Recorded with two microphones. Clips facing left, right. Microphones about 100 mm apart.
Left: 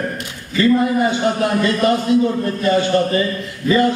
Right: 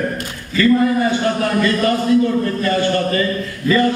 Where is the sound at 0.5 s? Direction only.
20° left (ahead or behind).